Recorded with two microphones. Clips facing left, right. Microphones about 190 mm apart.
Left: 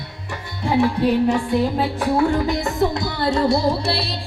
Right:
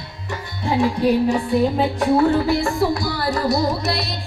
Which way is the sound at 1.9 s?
15° left (ahead or behind).